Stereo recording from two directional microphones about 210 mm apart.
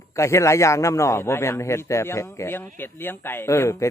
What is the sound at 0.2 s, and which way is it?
Speech, 15° left (ahead or behind).